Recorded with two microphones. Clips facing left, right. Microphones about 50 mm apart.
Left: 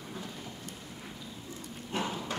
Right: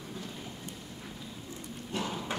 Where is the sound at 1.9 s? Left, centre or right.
Left.